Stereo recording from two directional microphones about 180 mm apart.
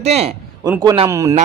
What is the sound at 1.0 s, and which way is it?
Speech, 15° right (ahead or behind).